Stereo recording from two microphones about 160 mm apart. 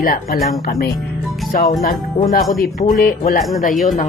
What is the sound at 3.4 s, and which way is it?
Speech, centre (ahead or behind).